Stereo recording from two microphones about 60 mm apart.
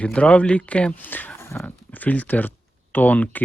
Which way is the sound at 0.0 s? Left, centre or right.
Left.